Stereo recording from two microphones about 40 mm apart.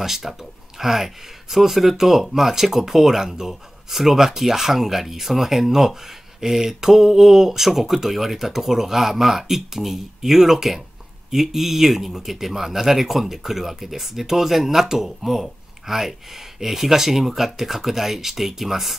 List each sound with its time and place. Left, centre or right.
0.0 s speech: centre